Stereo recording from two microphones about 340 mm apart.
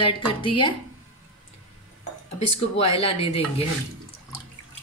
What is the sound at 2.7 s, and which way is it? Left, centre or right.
Speech, centre.